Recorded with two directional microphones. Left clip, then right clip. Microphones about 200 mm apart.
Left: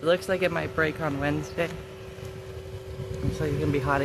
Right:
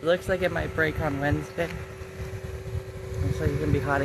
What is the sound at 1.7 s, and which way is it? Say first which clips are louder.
Vehicle: right 1 dB; 25° right (ahead or behind).